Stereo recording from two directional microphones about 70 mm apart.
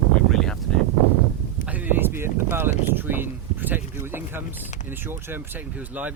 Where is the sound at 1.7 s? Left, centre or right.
Right.